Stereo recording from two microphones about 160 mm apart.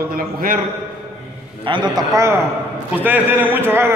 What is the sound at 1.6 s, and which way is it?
A man's voice, 30° right (ahead or behind).